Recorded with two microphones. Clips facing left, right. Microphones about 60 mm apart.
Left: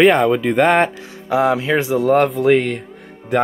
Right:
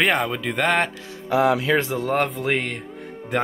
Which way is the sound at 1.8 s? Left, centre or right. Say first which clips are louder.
Left 8 dB; centre.